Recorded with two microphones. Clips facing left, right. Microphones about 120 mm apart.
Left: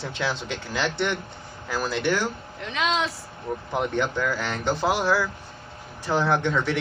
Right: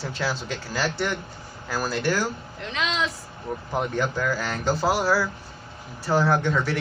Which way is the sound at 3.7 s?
20° left (ahead or behind).